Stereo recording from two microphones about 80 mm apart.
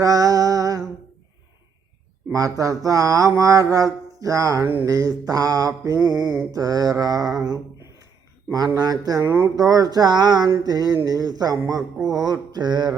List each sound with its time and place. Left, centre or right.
0.0 s music: right
2.3 s mantra: right
4.6 s mantra: right
4.9 s mantra: right
6.1 s a sound: centre
6.5 s mantra: right
11.9 s a sound: centre
12.2 s mantra: right